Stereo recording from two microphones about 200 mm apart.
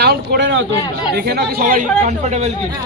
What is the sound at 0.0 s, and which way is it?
Speech, 55° right (ahead or behind).